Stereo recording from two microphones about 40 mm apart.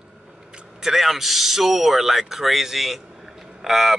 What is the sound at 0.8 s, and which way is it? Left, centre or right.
Speech, centre.